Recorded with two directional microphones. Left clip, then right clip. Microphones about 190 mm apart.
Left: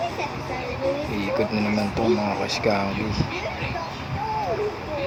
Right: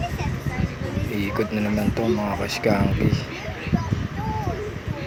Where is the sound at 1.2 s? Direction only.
25° right (ahead or behind).